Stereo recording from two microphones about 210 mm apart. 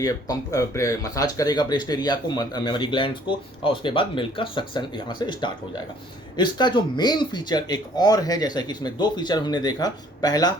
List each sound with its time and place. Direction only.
0.0 s speech: 15° left (ahead or behind)